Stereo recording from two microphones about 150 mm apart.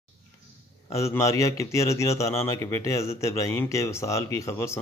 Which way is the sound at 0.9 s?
20° left (ahead or behind).